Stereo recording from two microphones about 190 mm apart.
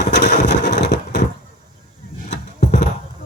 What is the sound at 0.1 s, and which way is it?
Wood, 65° left (ahead or behind).